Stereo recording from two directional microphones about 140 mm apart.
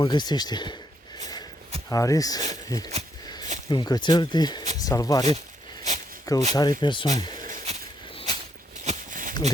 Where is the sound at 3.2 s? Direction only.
30° left (ahead or behind).